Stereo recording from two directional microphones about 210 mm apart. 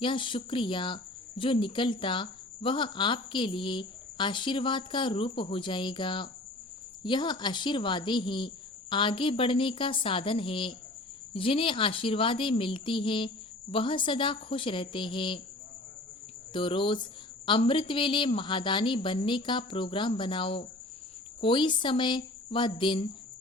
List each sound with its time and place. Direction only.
0.0 s speech: 25° left (ahead or behind)
16.5 s speech: 25° left (ahead or behind)